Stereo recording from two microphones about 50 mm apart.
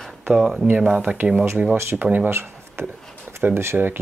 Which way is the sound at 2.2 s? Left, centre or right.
Right.